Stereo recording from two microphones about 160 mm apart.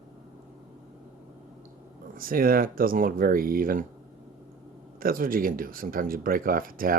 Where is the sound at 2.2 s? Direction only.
65° right (ahead or behind).